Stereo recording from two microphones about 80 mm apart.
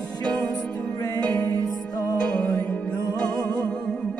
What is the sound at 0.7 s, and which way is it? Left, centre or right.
Music, left.